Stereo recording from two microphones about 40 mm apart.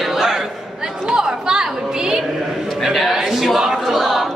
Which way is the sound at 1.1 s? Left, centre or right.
Centre.